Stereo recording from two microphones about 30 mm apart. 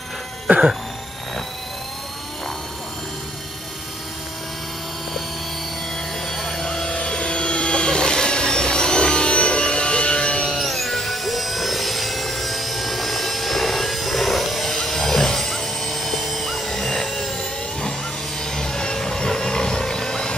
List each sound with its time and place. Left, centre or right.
0.5 s a sound: right
6.2 s vehicle: centre
7.1 s helicopter: left
10.6 s music: centre
14.7 s a sound: centre
18.4 s helicopter: left